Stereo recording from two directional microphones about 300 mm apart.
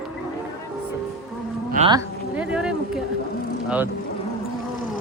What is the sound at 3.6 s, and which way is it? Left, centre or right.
Speech, centre.